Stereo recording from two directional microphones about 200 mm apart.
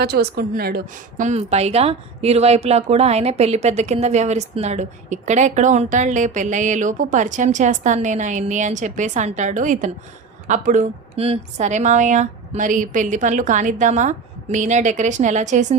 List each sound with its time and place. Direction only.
0.0 s speech: 50° right (ahead or behind)
1.2 s a woman's voice: 35° right (ahead or behind)